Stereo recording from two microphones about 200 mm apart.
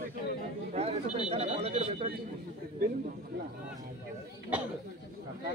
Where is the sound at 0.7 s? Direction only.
30° right (ahead or behind).